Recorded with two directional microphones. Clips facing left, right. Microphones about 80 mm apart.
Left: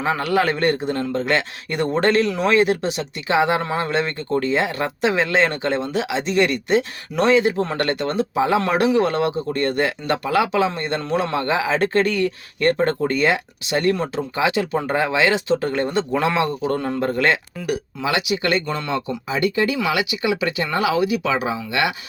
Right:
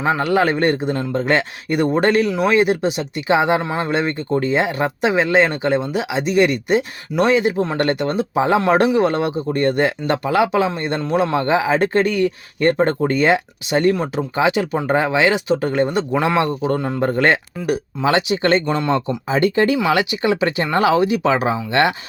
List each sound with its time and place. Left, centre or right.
0.0 s speech: right
2.6 s speech: right
17.1 s speech: right
18.6 s speech: centre
18.9 s speech: right